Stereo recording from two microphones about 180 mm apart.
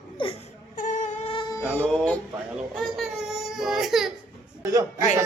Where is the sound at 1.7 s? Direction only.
5° left (ahead or behind).